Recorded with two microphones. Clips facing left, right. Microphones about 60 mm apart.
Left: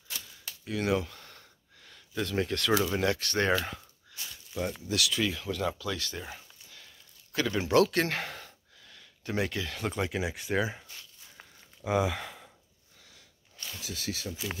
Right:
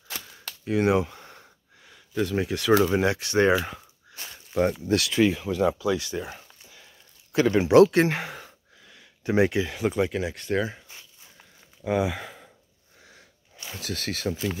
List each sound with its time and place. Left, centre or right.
0.2 s cap gun: right
0.7 s a sound: right
2.1 s speech: centre
2.8 s speech: right
4.1 s a sound: right
4.9 s speech: right
5.4 s speech: centre
7.6 s speech: right
8.2 s a sound: centre
9.8 s speech: centre
11.8 s speech: centre
13.7 s speech: right